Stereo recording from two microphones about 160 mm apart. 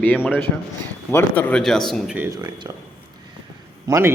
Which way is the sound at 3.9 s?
20° right (ahead or behind).